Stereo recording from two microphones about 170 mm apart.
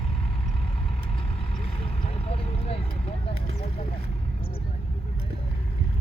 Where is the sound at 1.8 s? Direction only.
35° left (ahead or behind).